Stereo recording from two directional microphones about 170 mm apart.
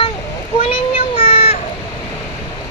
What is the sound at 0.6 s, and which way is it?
Child singing, 35° left (ahead or behind).